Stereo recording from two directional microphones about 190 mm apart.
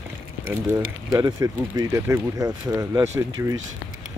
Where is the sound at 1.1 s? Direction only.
20° right (ahead or behind).